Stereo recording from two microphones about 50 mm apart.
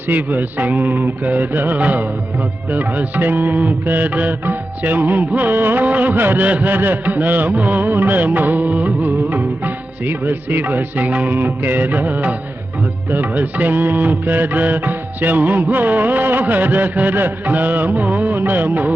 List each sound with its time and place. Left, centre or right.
0.1 s music: right